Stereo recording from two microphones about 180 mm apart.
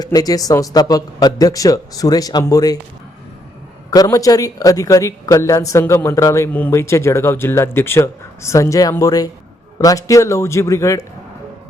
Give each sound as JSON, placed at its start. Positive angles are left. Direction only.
{"t": 0.0, "sound": "a man's voice", "side_deg": 20}
{"t": 3.9, "sound": "a man's voice", "side_deg": 20}